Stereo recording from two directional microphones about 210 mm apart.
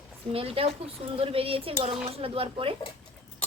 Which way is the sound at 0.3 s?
25° right (ahead or behind).